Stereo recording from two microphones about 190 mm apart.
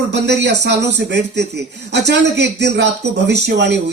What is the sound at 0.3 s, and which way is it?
A man's voice, 65° right (ahead or behind).